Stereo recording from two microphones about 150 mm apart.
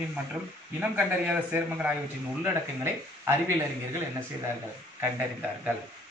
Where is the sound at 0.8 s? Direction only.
10° right (ahead or behind).